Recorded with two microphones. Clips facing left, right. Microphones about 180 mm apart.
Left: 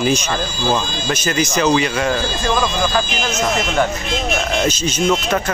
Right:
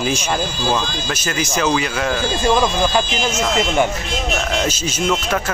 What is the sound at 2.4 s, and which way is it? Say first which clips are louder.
Speech: right 3 dB; 20° right (ahead or behind).